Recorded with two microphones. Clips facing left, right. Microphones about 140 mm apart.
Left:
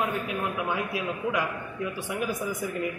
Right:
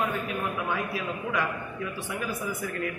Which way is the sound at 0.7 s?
15° left (ahead or behind).